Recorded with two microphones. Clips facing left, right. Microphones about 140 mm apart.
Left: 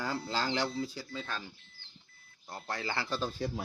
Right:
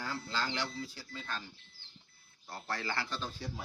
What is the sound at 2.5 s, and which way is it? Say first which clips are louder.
Speech: left 1 dB; 20° left (ahead or behind).